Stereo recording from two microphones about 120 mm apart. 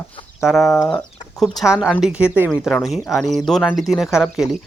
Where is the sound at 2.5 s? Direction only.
Centre (ahead or behind).